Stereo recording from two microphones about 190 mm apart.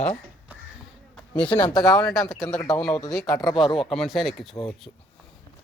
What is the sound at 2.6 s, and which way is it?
Speech, 15° left (ahead or behind).